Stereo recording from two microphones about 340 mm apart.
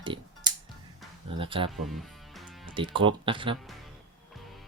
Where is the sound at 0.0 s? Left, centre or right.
Centre.